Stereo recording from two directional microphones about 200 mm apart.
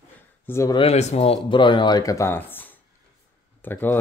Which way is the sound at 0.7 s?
30° left (ahead or behind).